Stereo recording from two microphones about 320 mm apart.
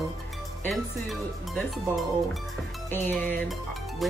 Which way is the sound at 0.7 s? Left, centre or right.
Centre.